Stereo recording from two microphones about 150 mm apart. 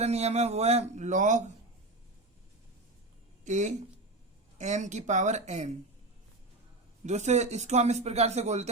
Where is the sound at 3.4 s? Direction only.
55° right (ahead or behind).